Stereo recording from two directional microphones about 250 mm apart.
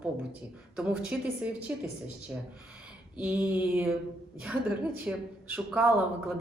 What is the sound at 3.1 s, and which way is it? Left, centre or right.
A woman's voice, centre.